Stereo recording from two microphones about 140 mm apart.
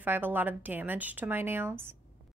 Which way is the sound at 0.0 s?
15° right (ahead or behind).